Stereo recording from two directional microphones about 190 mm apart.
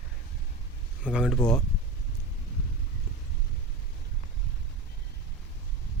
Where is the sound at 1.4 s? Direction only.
20° left (ahead or behind).